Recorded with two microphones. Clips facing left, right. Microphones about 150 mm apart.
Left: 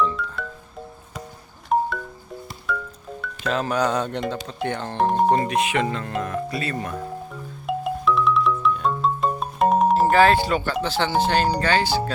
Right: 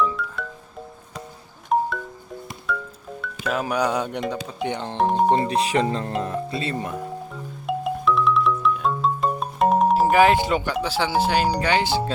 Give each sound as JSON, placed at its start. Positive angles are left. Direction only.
{"t": 0.0, "sound": "music", "side_deg": -5}
{"t": 1.7, "sound": "wind chime", "side_deg": 0}
{"t": 2.7, "sound": "music", "side_deg": 0}
{"t": 3.2, "sound": "speech", "side_deg": -5}
{"t": 5.5, "sound": "speech", "side_deg": -35}
{"t": 7.7, "sound": "music", "side_deg": 0}
{"t": 10.8, "sound": "speech", "side_deg": -10}